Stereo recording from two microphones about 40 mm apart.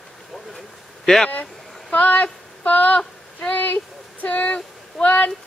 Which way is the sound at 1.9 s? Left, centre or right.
Left.